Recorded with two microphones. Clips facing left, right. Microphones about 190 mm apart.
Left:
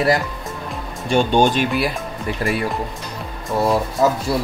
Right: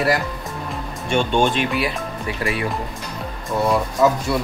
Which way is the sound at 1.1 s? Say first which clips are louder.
Left 3 dB; 40° left (ahead or behind).